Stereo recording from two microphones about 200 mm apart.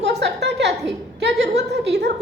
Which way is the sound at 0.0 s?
60° right (ahead or behind).